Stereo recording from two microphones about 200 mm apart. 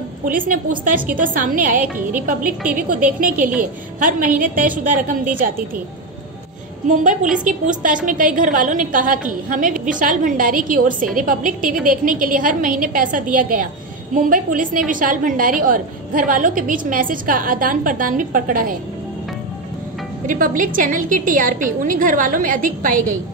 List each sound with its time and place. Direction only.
0.2 s a woman's voice: 45° right (ahead or behind)
6.9 s a woman's voice: 40° right (ahead or behind)
20.2 s a woman's voice: 40° right (ahead or behind)